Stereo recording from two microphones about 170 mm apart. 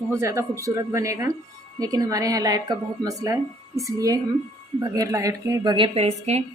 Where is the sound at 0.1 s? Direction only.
15° right (ahead or behind).